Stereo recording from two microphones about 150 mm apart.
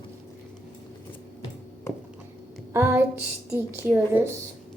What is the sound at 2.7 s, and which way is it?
A child's voice, 15° right (ahead or behind).